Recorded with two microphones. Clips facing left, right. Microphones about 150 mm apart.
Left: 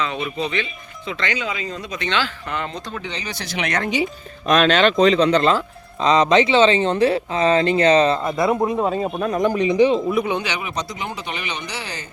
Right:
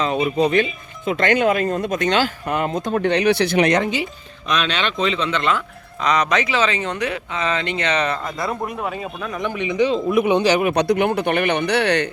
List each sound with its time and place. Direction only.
0.0 s speech: 40° right (ahead or behind); by 3.6 s 60° right (ahead or behind)
4.4 s speech: 45° left (ahead or behind); by 9.0 s 25° left (ahead or behind)
9.0 s speech: 40° left (ahead or behind)
10.4 s speech: 50° right (ahead or behind); by 12.0 s 65° right (ahead or behind)